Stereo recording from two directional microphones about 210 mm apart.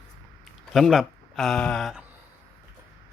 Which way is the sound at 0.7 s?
Centre (ahead or behind).